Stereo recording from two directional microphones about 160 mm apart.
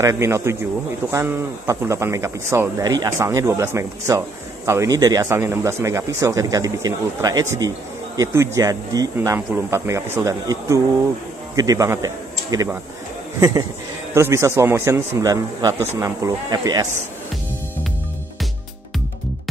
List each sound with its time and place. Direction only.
0.0 s speech: 20° right (ahead or behind)